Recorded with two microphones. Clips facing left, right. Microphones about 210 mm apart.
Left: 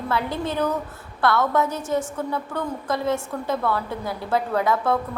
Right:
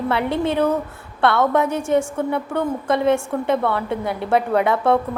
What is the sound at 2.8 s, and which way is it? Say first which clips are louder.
Speech: right 6 dB; 65° right (ahead or behind).